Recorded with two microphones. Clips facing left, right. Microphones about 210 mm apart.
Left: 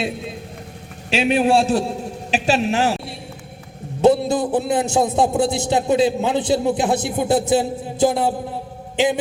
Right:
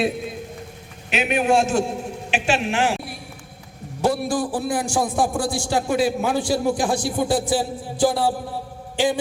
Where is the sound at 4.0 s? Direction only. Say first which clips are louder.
Left 6 dB; 20° left (ahead or behind).